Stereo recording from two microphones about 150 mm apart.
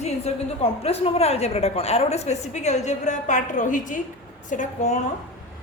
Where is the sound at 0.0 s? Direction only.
45° left (ahead or behind).